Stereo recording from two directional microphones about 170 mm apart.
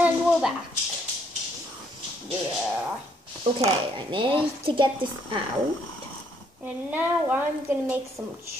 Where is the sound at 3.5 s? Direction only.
30° right (ahead or behind).